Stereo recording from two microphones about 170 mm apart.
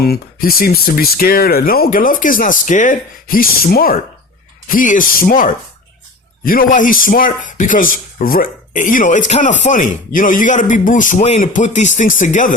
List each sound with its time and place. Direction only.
0.0 s speech: 65° left (ahead or behind); by 12.5 s 50° left (ahead or behind)